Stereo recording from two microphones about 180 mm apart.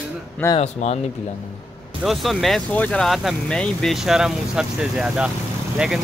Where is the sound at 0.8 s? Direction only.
40° left (ahead or behind).